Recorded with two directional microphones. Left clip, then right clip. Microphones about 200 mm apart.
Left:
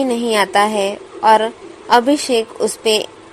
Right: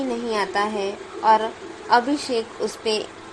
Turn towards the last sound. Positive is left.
turn(degrees=30)  # may be behind; listen again after turning